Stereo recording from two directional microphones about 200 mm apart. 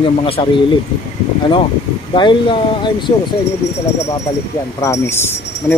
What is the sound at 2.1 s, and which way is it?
Speech, 25° left (ahead or behind).